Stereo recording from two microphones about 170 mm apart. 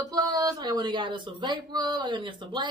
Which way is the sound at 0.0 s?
25° right (ahead or behind).